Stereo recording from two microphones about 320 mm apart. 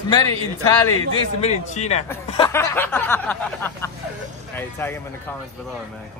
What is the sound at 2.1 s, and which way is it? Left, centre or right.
Snicker, centre.